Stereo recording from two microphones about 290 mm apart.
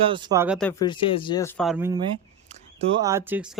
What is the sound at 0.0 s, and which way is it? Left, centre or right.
Speech, centre.